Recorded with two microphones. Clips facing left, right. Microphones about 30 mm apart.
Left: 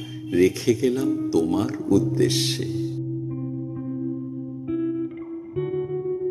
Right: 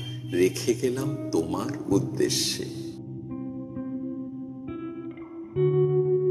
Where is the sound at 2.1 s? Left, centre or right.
Left.